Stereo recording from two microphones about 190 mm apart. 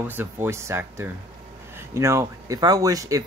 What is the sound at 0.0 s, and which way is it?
Speech, 10° right (ahead or behind).